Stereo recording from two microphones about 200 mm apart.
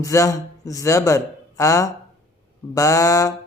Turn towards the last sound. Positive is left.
turn(degrees=15)  # may be behind; listen again after turning